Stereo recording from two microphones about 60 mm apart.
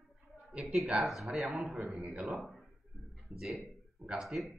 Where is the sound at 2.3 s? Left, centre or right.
Centre.